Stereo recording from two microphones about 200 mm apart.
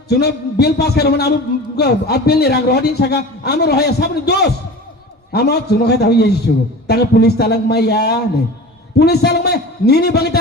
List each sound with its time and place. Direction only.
0.1 s a man's voice: 55° left (ahead or behind)